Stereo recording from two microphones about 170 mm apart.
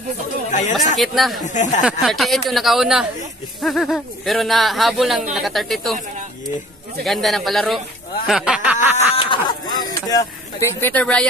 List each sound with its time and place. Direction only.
0.5 s speech: 45° left (ahead or behind)
0.9 s speech: centre (ahead or behind)
7.1 s speech: centre (ahead or behind)
8.7 s a sound: 40° left (ahead or behind)
9.9 s speech: 15° left (ahead or behind)